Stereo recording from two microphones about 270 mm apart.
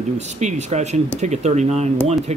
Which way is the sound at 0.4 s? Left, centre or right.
Right.